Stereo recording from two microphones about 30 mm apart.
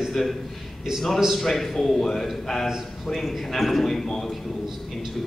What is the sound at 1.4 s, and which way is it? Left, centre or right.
Speech, centre.